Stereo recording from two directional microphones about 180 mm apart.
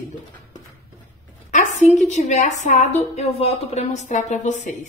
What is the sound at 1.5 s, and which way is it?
A woman's voice, 40° left (ahead or behind).